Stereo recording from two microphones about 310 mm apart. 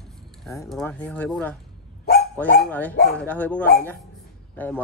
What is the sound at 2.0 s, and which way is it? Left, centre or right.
Dog, left.